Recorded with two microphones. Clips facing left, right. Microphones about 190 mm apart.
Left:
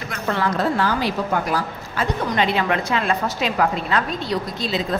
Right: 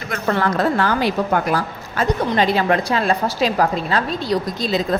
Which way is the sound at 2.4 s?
35° right (ahead or behind).